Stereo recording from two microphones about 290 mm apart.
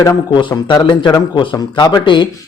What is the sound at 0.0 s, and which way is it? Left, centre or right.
Speech, centre.